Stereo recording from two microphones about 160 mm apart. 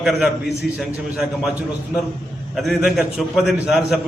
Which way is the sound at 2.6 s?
Centre (ahead or behind).